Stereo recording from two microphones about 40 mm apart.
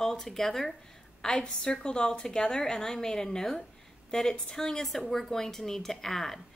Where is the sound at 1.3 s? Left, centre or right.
Left; by 6.4 s centre.